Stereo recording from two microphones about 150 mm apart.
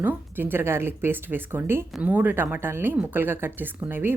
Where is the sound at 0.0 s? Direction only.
15° right (ahead or behind).